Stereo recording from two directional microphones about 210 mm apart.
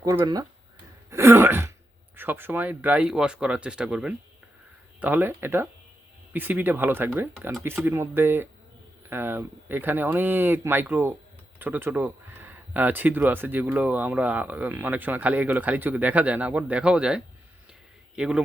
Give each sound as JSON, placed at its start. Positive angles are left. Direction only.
{"t": 0.0, "sound": "speech", "side_deg": -15}
{"t": 1.1, "sound": "a sound", "side_deg": -10}
{"t": 2.1, "sound": "speech", "side_deg": -10}